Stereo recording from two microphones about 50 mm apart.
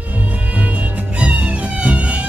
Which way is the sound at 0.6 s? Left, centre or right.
Right.